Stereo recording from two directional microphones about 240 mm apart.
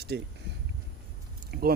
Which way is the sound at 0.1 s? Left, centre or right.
Right.